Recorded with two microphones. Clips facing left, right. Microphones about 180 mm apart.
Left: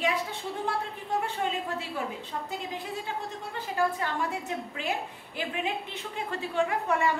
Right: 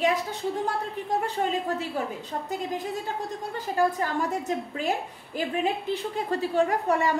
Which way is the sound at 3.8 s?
40° right (ahead or behind).